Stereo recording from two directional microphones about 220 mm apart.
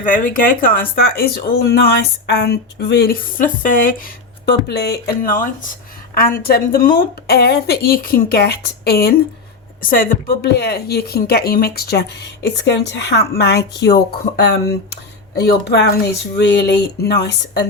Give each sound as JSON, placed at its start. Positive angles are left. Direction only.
{"t": 0.0, "sound": "speech", "side_deg": 40}